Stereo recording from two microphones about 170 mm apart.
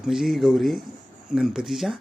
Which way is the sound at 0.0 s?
Centre (ahead or behind).